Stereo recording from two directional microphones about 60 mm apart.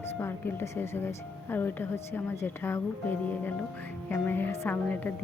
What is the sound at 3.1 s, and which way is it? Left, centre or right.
A woman's voice, left.